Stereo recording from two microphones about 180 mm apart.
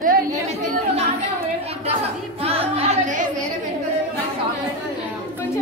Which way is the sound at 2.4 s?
35° right (ahead or behind).